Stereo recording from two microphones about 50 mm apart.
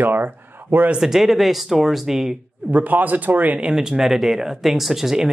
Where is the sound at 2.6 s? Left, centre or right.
Right.